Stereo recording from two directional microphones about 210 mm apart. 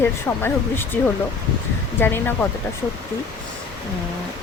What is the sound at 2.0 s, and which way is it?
Speech, 10° left (ahead or behind).